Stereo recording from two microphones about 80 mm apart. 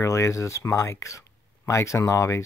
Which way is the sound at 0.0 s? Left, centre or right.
Left.